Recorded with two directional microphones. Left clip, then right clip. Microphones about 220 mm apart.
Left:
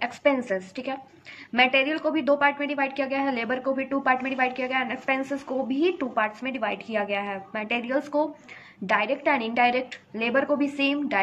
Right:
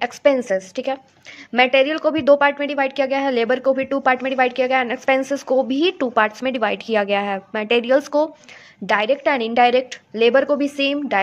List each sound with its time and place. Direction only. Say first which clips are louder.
0.0 s a woman's voice: right 7 dB; 45° right (ahead or behind)